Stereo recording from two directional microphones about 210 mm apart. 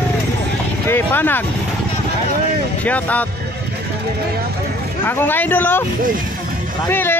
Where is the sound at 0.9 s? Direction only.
10° left (ahead or behind).